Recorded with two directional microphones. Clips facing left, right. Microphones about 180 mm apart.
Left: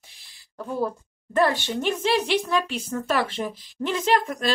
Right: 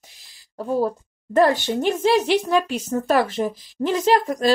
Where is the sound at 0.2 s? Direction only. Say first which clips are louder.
Right 5 dB; 35° right (ahead or behind).